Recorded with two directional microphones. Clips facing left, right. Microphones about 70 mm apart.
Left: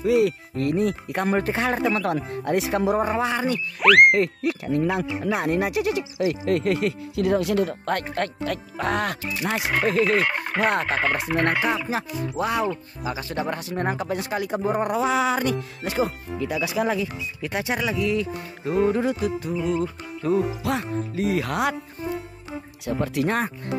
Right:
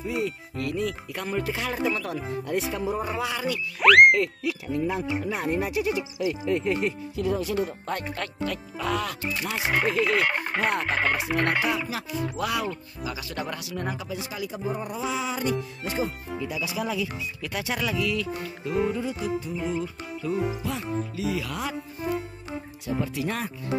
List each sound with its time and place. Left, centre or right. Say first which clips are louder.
0.0 s speech: left 9 dB; left
0.6 s speech: left 6 dB; left
3.1 s speech: left 5 dB; left
3.8 s frog: even; centre
4.1 s speech: left 3 dB; left
4.6 s speech: left 3 dB; left
17.4 s speech: left 4 dB; left
18.6 s speech: left 6 dB; left
21.1 s speech: left 5 dB; left
22.8 s speech: left 5 dB; left